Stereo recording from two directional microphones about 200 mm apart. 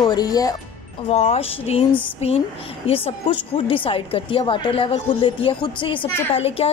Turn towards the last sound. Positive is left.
turn(degrees=30)  # may be behind; listen again after turning